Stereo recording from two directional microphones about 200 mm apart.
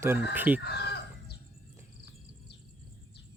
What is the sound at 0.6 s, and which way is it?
Chicken, 55° left (ahead or behind).